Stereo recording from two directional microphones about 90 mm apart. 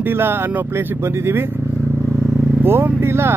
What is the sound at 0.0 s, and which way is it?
Speech, 25° right (ahead or behind).